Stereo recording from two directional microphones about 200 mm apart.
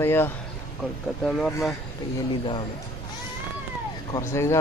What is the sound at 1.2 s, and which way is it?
Speech, centre (ahead or behind).